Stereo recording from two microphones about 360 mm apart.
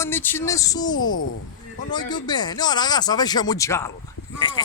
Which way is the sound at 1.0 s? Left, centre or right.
Left.